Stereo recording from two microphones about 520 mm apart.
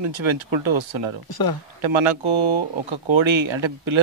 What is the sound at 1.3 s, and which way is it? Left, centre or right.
Speech, left.